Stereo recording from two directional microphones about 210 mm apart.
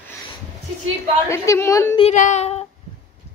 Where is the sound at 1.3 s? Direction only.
15° left (ahead or behind).